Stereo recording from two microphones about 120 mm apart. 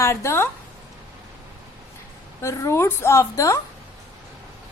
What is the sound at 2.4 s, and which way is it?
A woman's voice, 25° left (ahead or behind).